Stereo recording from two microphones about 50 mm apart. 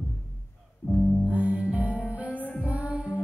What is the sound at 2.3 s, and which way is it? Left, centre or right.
Music, left.